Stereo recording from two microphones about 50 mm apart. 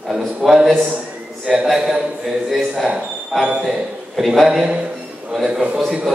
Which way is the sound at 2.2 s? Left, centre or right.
Centre.